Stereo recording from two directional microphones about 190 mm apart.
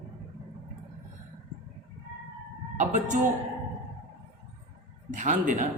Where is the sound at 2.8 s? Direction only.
40° right (ahead or behind).